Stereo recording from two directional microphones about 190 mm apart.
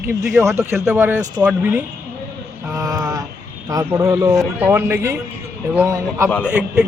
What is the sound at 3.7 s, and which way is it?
A man's voice, 15° right (ahead or behind).